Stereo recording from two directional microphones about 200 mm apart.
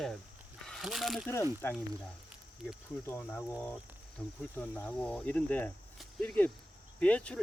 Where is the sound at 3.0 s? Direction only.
10° left (ahead or behind).